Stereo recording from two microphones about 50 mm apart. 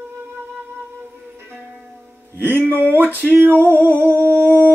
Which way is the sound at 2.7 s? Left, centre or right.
Right.